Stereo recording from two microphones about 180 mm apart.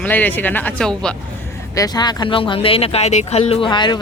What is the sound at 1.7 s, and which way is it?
Speech, 20° left (ahead or behind).